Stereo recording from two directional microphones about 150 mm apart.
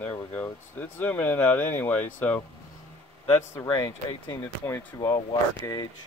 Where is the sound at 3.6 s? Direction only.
25° left (ahead or behind).